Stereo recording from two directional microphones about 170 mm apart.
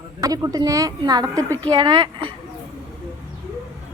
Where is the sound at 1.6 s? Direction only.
25° right (ahead or behind).